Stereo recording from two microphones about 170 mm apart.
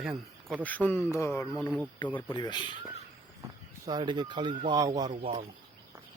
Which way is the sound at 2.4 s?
25° left (ahead or behind).